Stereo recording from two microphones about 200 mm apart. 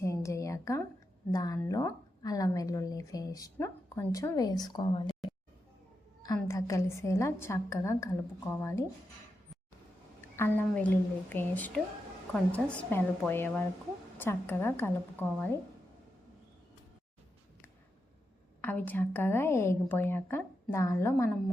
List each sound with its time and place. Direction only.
0.0 s a sound: 15° left (ahead or behind)
1.3 s a woman's voice: 20° left (ahead or behind)
6.2 s a woman's voice: 15° left (ahead or behind)
10.2 s a woman's voice: 10° left (ahead or behind)
18.6 s a woman's voice: 10° left (ahead or behind)